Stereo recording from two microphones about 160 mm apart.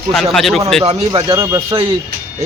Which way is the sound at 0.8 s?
30° right (ahead or behind).